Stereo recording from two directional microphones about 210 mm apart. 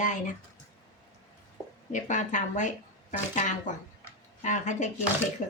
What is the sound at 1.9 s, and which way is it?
Speech, 35° left (ahead or behind).